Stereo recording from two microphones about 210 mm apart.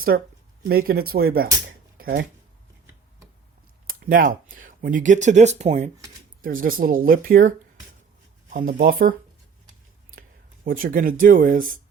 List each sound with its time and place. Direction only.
0.1 s speech: 55° right (ahead or behind)
1.6 s a sound: 45° right (ahead or behind)
3.8 s speech: 40° right (ahead or behind)
10.2 s speech: 40° right (ahead or behind)